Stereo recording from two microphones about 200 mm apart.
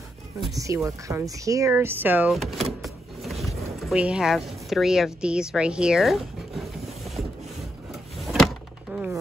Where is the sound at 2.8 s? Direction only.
Centre (ahead or behind).